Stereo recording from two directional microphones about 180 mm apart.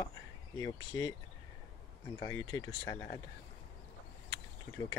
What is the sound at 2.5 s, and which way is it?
Speech, 20° left (ahead or behind).